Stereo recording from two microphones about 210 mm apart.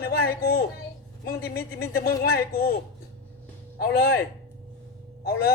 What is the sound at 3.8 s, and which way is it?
A man's voice, 45° left (ahead or behind).